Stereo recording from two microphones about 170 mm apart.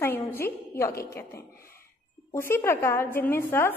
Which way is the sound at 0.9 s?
65° left (ahead or behind).